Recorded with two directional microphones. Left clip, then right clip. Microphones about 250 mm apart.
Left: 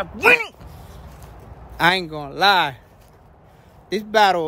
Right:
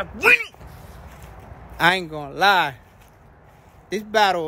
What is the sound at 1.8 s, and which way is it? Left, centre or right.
Speech, centre.